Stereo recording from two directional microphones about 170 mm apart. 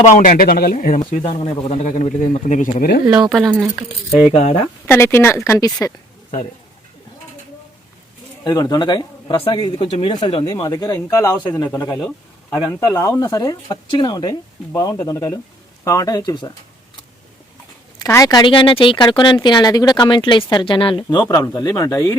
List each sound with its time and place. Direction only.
0.0 s speech: 50° left (ahead or behind)
1.2 s speech: 40° left (ahead or behind); by 3.0 s 55° left (ahead or behind)
3.1 s speech: 5° right (ahead or behind)
4.3 s speech: 40° left (ahead or behind)
4.9 s speech: 15° left (ahead or behind)
8.4 s speech: 25° left (ahead or behind)
11.9 s a sound: 5° left (ahead or behind)
12.5 s speech: 20° left (ahead or behind)
18.0 s speech: 20° left (ahead or behind)